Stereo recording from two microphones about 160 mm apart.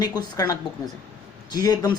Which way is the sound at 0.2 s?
25° left (ahead or behind).